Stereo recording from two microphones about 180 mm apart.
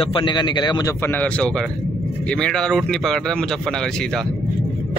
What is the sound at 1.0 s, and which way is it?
A man's voice, 10° left (ahead or behind).